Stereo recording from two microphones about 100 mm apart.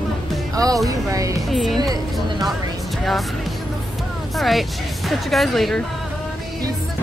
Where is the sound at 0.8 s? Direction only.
35° right (ahead or behind).